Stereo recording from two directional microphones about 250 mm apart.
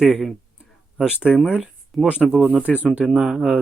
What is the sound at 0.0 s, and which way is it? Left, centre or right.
Speech, centre.